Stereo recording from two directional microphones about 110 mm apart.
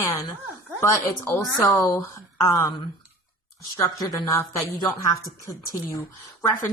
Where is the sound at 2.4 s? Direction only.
20° left (ahead or behind).